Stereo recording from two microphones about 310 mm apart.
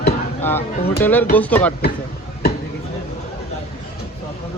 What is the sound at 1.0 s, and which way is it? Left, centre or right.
Speech, centre.